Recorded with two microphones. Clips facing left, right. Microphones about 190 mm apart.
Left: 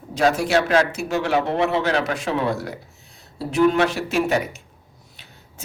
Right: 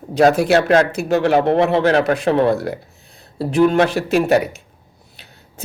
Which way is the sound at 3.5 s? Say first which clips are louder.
Right 3 dB; 35° right (ahead or behind).